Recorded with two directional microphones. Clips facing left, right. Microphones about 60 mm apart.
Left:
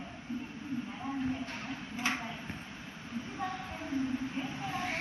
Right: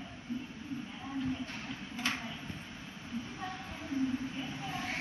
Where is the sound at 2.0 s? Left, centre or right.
Left.